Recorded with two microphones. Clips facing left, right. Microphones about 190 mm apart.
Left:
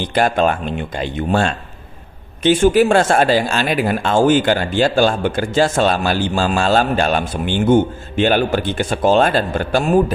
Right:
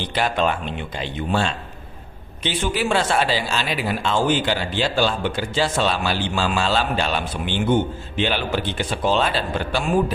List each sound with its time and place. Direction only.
0.0 s speech: 45° left (ahead or behind)